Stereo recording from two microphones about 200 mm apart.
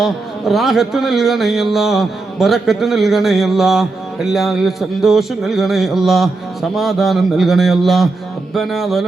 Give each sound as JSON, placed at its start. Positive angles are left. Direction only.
{"t": 0.0, "sound": "speech", "side_deg": 0}